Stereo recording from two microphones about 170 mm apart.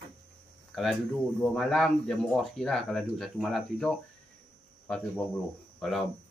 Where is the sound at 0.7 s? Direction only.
Centre (ahead or behind).